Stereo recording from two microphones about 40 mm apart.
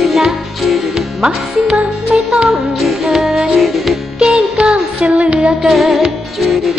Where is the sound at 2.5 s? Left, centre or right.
Centre.